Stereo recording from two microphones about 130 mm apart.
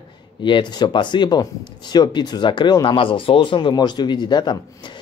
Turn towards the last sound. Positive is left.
turn(degrees=35)  # may be behind; listen again after turning